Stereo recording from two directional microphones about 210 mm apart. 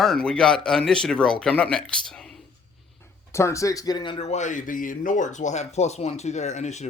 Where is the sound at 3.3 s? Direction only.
15° left (ahead or behind).